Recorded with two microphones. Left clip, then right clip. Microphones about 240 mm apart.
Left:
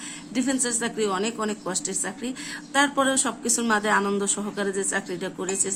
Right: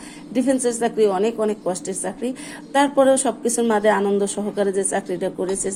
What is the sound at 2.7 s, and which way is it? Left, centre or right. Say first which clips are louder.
A woman's voice: right 6 dB; centre.